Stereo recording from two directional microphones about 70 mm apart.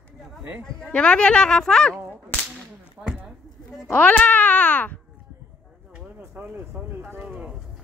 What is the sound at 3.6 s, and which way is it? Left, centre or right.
A child's voice, left.